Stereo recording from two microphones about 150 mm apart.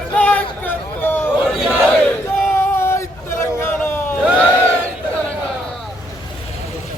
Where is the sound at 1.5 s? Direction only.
5° right (ahead or behind).